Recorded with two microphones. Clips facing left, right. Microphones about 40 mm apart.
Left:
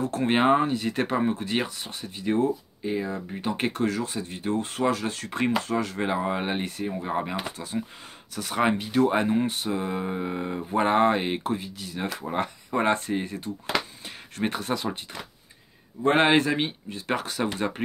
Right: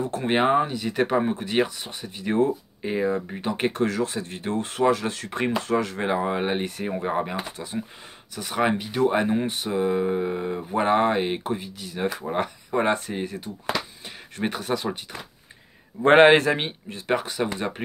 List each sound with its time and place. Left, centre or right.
0.2 s speech: centre
2.3 s speech: right; by 3.8 s centre
3.8 s speech: right
5.9 s speech: centre
6.8 s speech: right
7.1 s speech: centre
7.5 s speech: right
8.4 s speech: centre
16.2 s speech: right
17.1 s speech: centre